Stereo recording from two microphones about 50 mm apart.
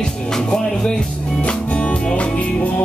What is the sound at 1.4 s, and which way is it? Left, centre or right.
Music, left.